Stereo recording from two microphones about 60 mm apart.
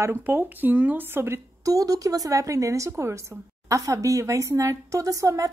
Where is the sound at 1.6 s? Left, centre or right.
Right.